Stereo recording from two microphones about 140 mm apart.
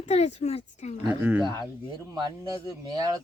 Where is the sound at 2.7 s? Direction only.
30° right (ahead or behind).